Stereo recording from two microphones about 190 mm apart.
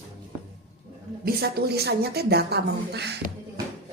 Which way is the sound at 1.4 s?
55° right (ahead or behind).